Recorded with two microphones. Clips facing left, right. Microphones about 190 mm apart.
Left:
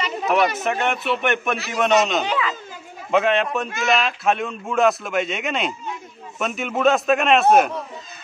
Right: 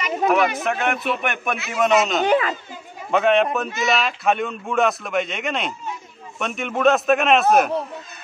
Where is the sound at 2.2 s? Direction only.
50° right (ahead or behind).